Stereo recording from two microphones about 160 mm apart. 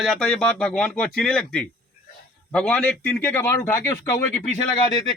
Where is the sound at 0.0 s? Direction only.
5° left (ahead or behind).